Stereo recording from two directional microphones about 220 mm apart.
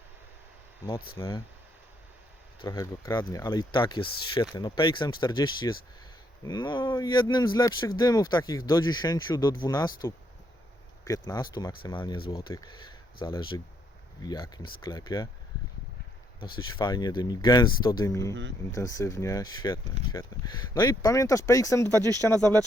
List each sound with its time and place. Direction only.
1.1 s speech: 25° left (ahead or behind)
2.6 s speech: 15° left (ahead or behind)
11.3 s speech: 15° left (ahead or behind)
16.6 s speech: 20° left (ahead or behind)
21.9 s speech: 15° right (ahead or behind)